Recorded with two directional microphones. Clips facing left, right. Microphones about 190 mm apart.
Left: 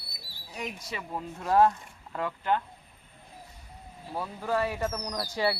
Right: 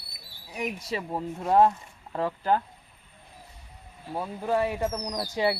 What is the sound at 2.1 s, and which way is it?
Speech, 35° right (ahead or behind).